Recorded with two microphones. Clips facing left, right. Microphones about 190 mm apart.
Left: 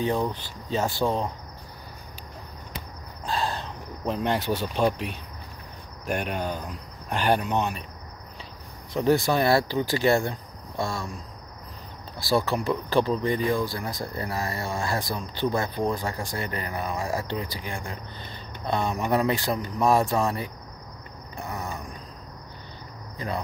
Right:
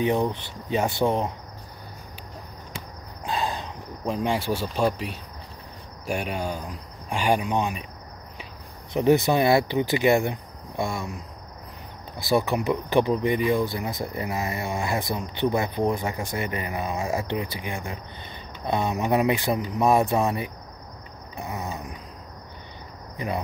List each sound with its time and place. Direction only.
0.0 s speech: 20° right (ahead or behind)
3.3 s speech: 15° right (ahead or behind)
8.9 s speech: 20° right (ahead or behind)
12.2 s speech: 20° right (ahead or behind)
21.4 s mechanisms: 20° right (ahead or behind)
23.1 s speech: 20° right (ahead or behind)